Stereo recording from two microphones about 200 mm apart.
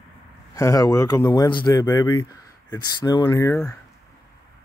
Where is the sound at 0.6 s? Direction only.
15° left (ahead or behind).